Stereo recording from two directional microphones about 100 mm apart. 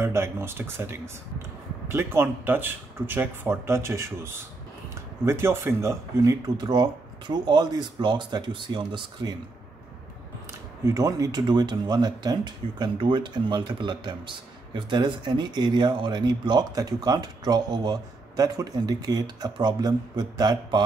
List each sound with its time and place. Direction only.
0.0 s speech: 25° right (ahead or behind); by 9.4 s 45° right (ahead or behind)
10.9 s speech: 35° right (ahead or behind)